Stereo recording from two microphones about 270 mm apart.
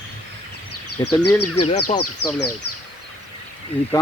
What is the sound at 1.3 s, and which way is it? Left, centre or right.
Speech, left.